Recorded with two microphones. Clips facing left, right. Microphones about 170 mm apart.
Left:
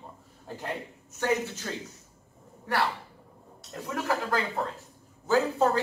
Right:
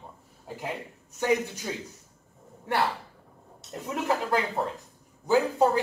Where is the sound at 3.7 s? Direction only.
20° right (ahead or behind).